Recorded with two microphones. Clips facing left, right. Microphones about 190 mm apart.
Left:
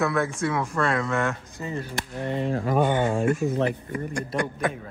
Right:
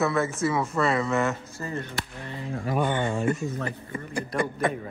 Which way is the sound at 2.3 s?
70° left (ahead or behind).